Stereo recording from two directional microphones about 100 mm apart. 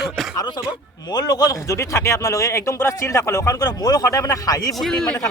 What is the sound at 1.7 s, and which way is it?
A man's voice, 30° left (ahead or behind).